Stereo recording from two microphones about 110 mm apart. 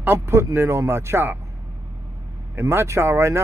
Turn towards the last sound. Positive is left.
turn(degrees=-25)  # may be behind; listen again after turning